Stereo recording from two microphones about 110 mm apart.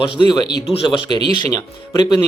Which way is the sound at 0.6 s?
60° left (ahead or behind).